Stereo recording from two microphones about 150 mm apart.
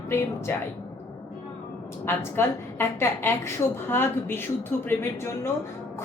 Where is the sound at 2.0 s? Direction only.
15° left (ahead or behind).